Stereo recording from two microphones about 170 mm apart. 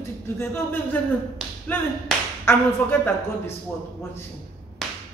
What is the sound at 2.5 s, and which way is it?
A man's voice, 10° left (ahead or behind).